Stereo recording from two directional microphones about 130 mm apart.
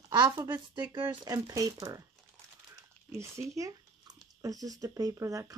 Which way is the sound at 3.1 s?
20° right (ahead or behind).